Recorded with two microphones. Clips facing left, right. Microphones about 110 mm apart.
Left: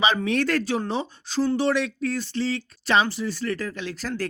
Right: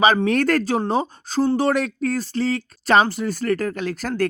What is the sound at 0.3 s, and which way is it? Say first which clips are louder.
Speech: right 4 dB; 45° right (ahead or behind).